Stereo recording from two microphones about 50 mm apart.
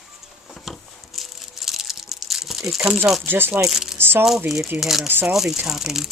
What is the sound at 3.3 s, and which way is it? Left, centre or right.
Speech, right.